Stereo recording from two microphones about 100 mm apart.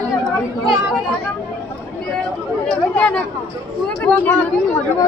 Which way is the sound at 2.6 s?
10° left (ahead or behind).